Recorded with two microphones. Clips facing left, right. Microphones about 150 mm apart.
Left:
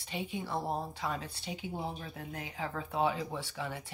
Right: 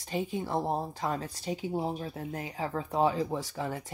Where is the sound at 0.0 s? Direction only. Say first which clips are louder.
Right 6 dB; 40° right (ahead or behind).